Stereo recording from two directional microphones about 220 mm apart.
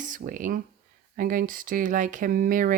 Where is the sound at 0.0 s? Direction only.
40° right (ahead or behind).